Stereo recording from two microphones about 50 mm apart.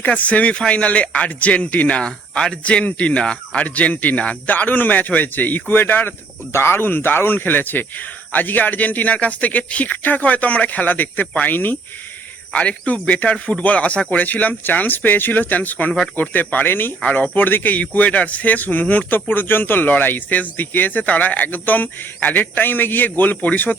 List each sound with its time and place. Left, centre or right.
0.0 s speech: left
2.0 s speech: centre; by 6.1 s left
6.5 s speech: left
12.5 s speech: left
17.0 s speech: left
17.3 s speech: left